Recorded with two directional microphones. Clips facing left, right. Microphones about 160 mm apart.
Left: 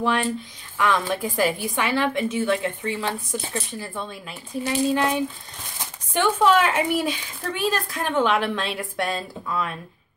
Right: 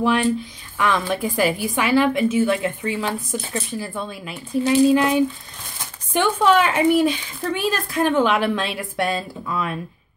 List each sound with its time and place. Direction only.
0.0 s speech: 5° right (ahead or behind)